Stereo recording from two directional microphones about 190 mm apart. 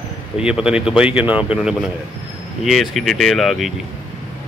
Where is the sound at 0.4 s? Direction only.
5° right (ahead or behind).